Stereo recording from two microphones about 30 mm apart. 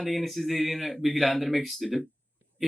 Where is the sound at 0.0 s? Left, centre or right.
Centre.